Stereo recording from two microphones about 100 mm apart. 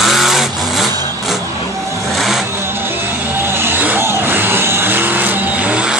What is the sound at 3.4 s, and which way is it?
Vehicle, 20° right (ahead or behind).